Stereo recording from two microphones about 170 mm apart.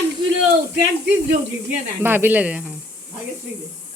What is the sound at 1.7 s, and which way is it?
Speech, 10° right (ahead or behind).